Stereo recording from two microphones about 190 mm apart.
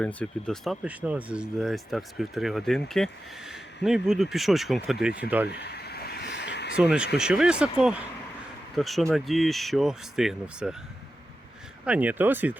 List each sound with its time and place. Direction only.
0.0 s speech: 5° left (ahead or behind)
5.5 s a sound: 60° left (ahead or behind)
6.7 s speech: 5° right (ahead or behind)
11.9 s speech: 10° right (ahead or behind)